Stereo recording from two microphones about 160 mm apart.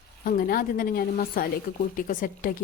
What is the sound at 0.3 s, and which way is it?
Speech, 65° left (ahead or behind).